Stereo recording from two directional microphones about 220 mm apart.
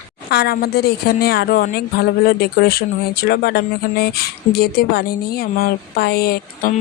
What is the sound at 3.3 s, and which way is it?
Speech, 45° left (ahead or behind).